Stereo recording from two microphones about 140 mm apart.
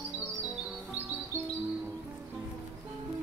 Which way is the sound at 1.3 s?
15° right (ahead or behind).